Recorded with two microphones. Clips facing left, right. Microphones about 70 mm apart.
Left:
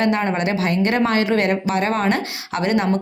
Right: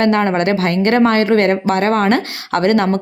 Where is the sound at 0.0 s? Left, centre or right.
Right.